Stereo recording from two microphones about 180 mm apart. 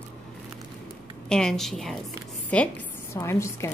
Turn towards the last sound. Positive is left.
turn(degrees=15)  # may be behind; listen again after turning